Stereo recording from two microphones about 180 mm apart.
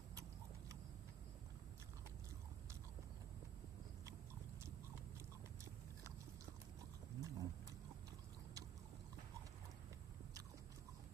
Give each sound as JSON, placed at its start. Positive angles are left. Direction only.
{"t": 7.2, "sound": "horse", "side_deg": -20}